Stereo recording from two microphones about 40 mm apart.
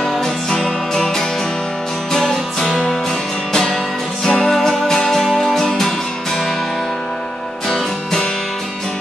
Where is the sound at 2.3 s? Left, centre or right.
Centre.